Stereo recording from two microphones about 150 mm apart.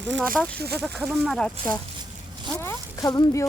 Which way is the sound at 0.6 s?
90° right.